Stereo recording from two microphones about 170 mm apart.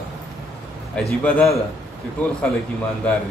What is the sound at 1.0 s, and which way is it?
Speech, 5° left (ahead or behind).